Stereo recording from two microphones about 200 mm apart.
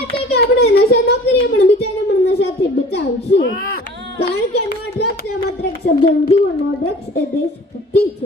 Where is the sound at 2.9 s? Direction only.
60° left (ahead or behind).